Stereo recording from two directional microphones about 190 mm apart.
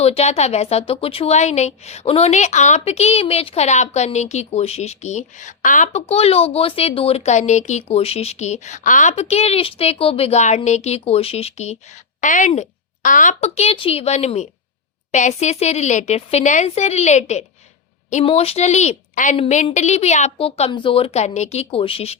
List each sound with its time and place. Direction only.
0.0 s a woman's voice: 35° left (ahead or behind)